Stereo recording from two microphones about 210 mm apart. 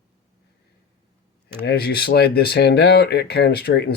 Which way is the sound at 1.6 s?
50° left (ahead or behind).